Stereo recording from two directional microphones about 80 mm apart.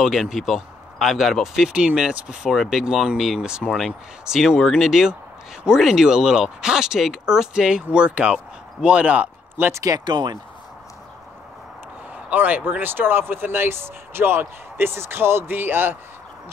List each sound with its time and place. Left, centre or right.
0.0 s speech: centre
9.7 s speech: right
9.9 s speech: right
12.3 s speech: right